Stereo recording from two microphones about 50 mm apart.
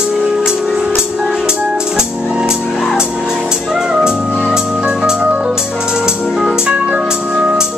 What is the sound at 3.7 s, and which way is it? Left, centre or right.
Music, centre.